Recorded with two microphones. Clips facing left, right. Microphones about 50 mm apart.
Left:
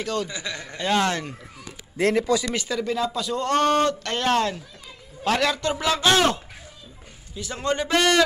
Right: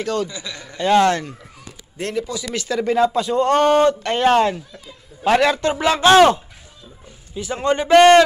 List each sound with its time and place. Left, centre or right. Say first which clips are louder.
0.0 s speech: right 5 dB; centre
0.3 s a man's voice: left 1 dB; left
0.7 s speech: right 8 dB; centre
2.1 s speech: even; left
2.8 s a man's voice: right 10 dB; right
3.2 s a man's voice: right 6 dB; right
7.3 s a man's voice: right 6 dB; right
7.9 s a man's voice: right 12 dB; right